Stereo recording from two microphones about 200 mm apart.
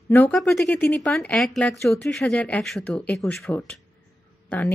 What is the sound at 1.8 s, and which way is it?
Speech, 15° left (ahead or behind).